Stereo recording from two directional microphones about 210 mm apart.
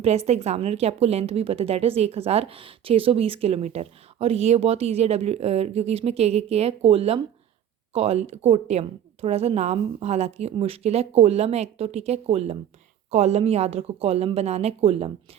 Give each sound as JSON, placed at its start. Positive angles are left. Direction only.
{"t": 0.0, "sound": "a woman's voice", "side_deg": -30}